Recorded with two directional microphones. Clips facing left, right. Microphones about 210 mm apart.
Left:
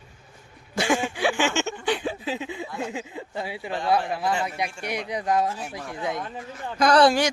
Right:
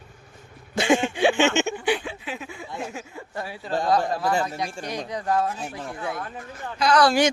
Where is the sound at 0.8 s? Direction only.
25° right (ahead or behind).